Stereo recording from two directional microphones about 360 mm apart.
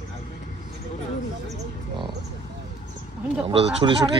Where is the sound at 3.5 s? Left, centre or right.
Centre.